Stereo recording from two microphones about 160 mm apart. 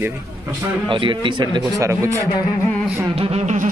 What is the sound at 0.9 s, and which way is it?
Speech, 30° right (ahead or behind).